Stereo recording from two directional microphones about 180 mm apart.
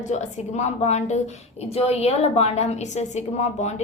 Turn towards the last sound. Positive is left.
turn(degrees=40)  # may be behind; listen again after turning